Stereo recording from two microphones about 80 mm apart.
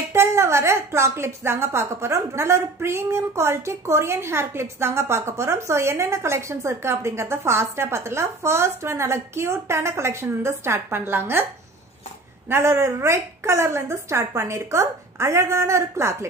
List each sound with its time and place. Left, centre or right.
0.1 s a woman's voice: right
12.4 s a woman's voice: right